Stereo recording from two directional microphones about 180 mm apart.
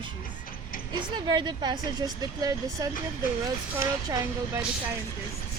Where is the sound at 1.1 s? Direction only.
25° right (ahead or behind).